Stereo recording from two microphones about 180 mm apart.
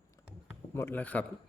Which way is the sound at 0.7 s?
10° left (ahead or behind).